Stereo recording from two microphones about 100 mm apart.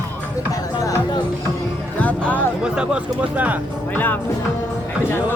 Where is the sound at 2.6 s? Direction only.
10° right (ahead or behind).